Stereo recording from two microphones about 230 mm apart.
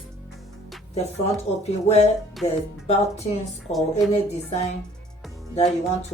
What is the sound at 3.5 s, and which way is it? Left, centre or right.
Speech, centre.